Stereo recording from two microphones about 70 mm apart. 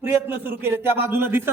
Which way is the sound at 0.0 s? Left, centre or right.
Right.